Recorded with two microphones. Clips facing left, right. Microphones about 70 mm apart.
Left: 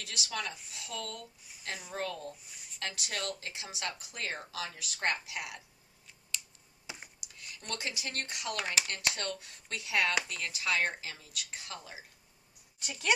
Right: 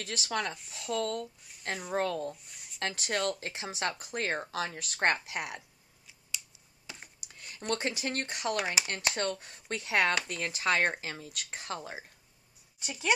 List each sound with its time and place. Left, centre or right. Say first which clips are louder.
0.0 s speech: right 5 dB; right
0.6 s speech: right 9 dB; centre
0.9 s speech: right 9 dB; right
2.3 s a sound: right 1 dB; centre
3.0 s speech: right 8 dB; right
6.9 s computer keyboard: left 1 dB; centre
7.3 s a sound: even; right
7.7 s speech: right 6 dB; right
8.5 s speech: right 3 dB; centre; by 12.0 s right
12.8 s speech: right 2 dB; centre